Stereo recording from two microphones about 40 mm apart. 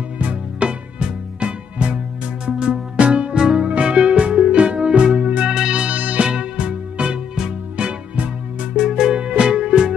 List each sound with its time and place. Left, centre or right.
0.2 s music: right
0.7 s music: right
5.9 s music: right
6.2 s music: right
8.7 s music: centre